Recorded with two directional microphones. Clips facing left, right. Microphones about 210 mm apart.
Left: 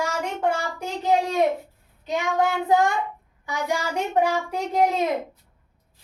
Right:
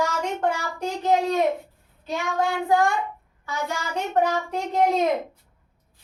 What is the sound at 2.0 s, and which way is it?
Child singing, 20° left (ahead or behind).